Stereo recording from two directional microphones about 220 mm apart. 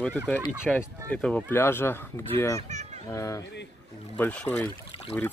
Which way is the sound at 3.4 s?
50° left (ahead or behind).